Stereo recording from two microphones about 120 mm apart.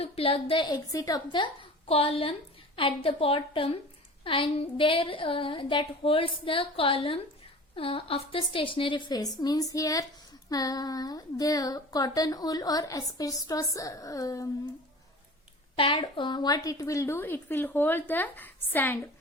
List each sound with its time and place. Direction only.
0.0 s a woman's voice: 50° left (ahead or behind)
0.9 s a woman's voice: 30° left (ahead or behind)
1.9 s a woman's voice: 50° left (ahead or behind); by 14.5 s 30° left (ahead or behind)
15.7 s a woman's voice: 45° left (ahead or behind); by 18.9 s 15° left (ahead or behind)